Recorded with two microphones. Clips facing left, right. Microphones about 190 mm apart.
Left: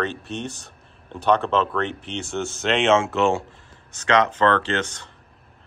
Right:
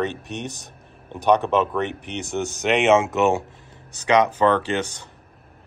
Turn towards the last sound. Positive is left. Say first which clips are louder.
# right 1 dB
turn(degrees=-10)  # may be behind; listen again after turning